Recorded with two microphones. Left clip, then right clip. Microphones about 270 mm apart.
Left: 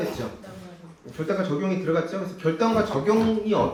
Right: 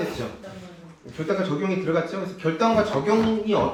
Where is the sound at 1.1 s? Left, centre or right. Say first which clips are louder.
Right 1 dB; centre.